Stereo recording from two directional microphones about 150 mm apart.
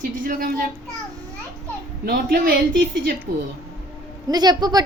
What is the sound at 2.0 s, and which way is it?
Speech, 85° right.